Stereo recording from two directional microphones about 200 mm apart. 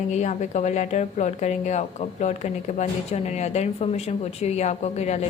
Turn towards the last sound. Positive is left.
turn(degrees=35)  # may be behind; listen again after turning